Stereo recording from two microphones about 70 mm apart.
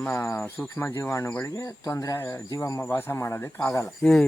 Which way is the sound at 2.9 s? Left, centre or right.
Left.